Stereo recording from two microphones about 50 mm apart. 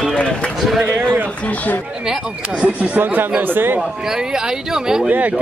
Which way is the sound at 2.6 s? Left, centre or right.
Right.